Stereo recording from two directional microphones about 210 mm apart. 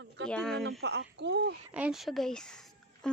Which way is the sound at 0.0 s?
60° right (ahead or behind).